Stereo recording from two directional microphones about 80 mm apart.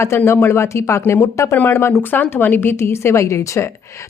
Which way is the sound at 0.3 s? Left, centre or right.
Left.